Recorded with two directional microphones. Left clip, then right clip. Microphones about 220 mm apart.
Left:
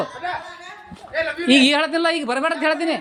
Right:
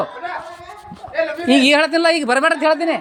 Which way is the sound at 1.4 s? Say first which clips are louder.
Even; centre (ahead or behind).